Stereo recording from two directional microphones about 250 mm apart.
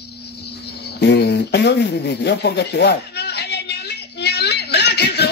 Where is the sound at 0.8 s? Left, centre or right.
Left.